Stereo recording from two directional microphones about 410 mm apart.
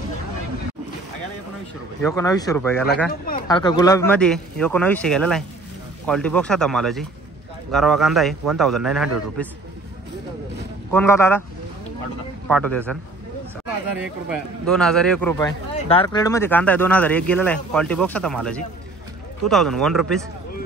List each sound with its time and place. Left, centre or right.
2.0 s speech: centre
3.1 s speech: left
3.4 s speech: centre
10.9 s speech: centre
12.4 s speech: centre
14.7 s speech: centre